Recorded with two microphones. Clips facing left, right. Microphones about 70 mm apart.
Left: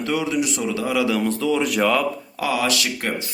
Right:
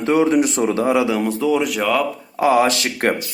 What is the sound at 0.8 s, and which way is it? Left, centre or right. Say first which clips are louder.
Speech: even; right.